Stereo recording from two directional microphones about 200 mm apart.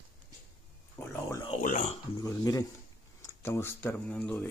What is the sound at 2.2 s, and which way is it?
Speech, 15° left (ahead or behind).